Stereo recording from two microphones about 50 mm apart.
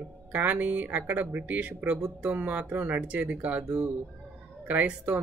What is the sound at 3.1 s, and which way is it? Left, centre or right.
Speech, right.